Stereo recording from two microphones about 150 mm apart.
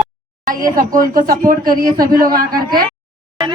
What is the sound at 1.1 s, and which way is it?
Speech, 70° right (ahead or behind).